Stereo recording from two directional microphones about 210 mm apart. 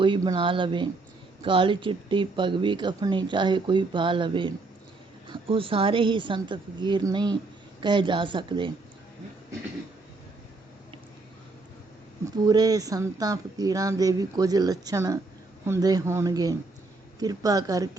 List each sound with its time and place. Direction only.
0.0 s speech: 25° right (ahead or behind)
12.2 s speech: 20° right (ahead or behind)